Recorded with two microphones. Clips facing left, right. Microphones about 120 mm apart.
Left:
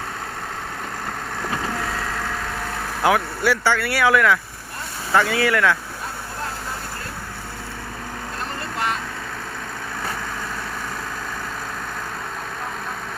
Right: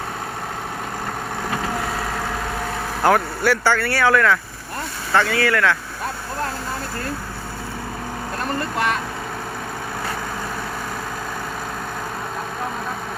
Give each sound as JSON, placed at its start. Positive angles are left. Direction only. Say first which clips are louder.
{"t": 3.0, "sound": "speech", "louder": "right 2 dB", "side_deg": 0}
{"t": 8.7, "sound": "vehicle", "louder": "right 2 dB", "side_deg": -60}